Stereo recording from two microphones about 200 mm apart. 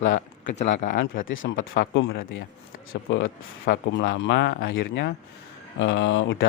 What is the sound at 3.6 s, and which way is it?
Speech, 55° left (ahead or behind).